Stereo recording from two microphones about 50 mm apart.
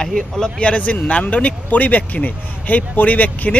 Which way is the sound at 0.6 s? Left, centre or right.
Left.